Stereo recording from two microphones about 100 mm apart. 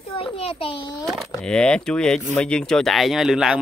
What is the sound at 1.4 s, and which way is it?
Speech, 10° left (ahead or behind).